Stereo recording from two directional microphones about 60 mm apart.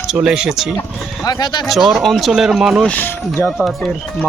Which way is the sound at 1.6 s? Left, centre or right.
Centre.